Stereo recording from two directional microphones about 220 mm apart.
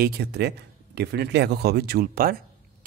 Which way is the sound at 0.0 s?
45° right (ahead or behind).